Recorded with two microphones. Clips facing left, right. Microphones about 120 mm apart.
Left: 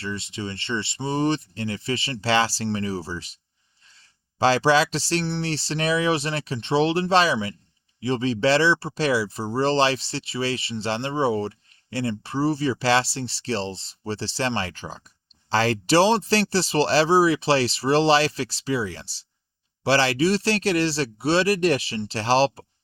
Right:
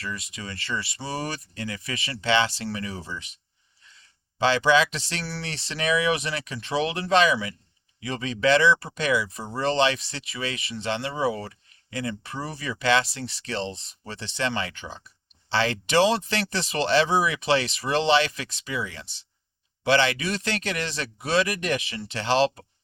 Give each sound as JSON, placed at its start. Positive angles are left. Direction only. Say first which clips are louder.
{"t": 0.0, "sound": "speech", "louder": "left 5 dB", "side_deg": 30}
{"t": 4.4, "sound": "speech", "louder": "left 2 dB", "side_deg": 35}